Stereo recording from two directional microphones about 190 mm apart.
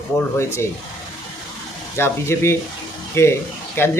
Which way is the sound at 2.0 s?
15° left (ahead or behind).